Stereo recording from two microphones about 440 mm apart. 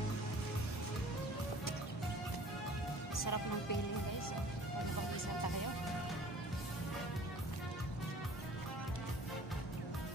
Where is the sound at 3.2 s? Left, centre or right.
Left.